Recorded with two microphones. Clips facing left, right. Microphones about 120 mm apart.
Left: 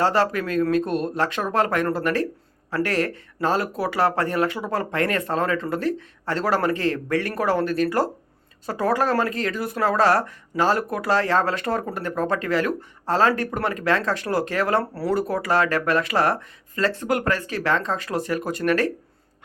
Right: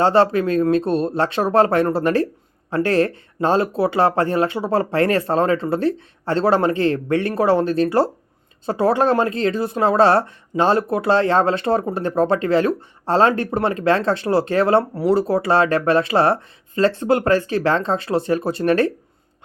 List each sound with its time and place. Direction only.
0.0 s speech: 30° right (ahead or behind)